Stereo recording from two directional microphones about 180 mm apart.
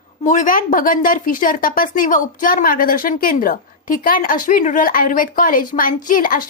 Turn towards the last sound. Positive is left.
turn(degrees=50)  # may be behind; listen again after turning